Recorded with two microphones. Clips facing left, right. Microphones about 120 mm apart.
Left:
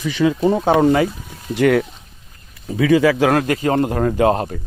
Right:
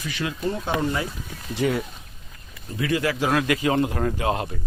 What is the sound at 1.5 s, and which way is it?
Speech, 70° left (ahead or behind).